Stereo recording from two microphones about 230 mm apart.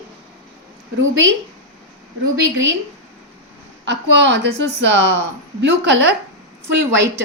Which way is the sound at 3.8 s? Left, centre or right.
Right.